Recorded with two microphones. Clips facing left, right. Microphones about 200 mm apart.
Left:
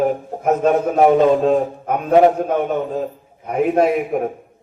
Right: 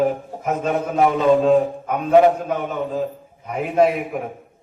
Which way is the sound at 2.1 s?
35° left (ahead or behind).